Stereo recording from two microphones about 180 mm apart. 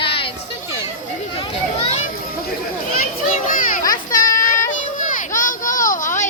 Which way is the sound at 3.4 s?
50° left (ahead or behind).